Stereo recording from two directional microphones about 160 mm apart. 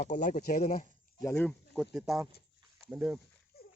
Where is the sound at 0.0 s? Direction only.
55° left (ahead or behind).